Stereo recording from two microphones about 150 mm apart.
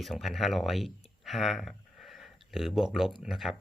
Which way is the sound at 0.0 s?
Centre (ahead or behind).